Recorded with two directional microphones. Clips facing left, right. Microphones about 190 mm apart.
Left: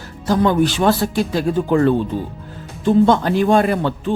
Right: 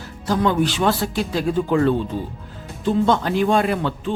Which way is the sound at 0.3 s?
45° left (ahead or behind).